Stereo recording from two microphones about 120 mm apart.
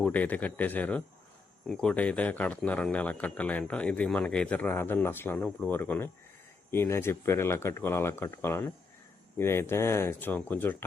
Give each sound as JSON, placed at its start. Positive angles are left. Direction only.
{"t": 0.0, "sound": "speech", "side_deg": 15}